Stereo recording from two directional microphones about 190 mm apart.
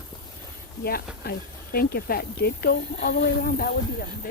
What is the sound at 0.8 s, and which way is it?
Snake, 50° left (ahead or behind).